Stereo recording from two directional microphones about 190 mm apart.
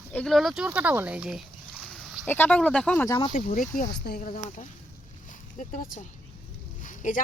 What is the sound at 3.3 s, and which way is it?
Speech, 45° left (ahead or behind).